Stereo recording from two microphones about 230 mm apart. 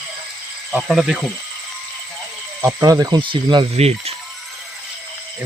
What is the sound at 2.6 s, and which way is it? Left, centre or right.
Speech, centre.